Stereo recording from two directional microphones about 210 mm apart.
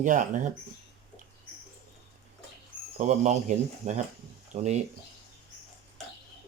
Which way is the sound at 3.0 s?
35° right (ahead or behind).